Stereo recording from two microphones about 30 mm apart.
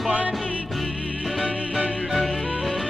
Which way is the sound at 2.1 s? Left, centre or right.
Centre.